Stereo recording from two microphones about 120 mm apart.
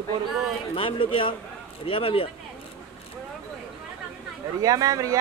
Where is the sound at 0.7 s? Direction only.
50° left (ahead or behind).